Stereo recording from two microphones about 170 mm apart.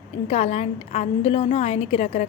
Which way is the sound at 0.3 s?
40° left (ahead or behind).